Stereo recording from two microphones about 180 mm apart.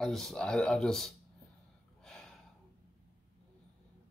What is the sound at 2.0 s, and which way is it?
Gasp, 5° left (ahead or behind).